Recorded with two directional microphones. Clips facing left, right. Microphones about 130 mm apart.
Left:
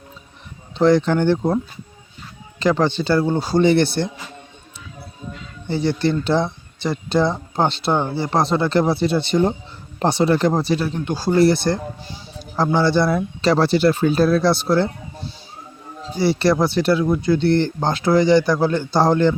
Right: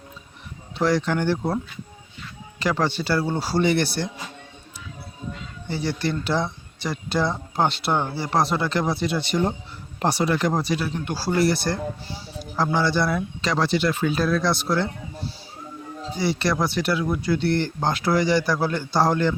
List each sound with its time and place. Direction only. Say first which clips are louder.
0.8 s speech: left 6 dB; 25° left (ahead or behind)
2.6 s speech: left 5 dB; 20° left (ahead or behind)
5.6 s speech: left 6 dB; 25° left (ahead or behind)
16.1 s speech: left 6 dB; 30° left (ahead or behind)